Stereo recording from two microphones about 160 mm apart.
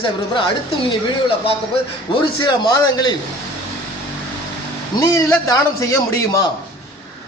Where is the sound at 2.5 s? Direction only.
25° left (ahead or behind).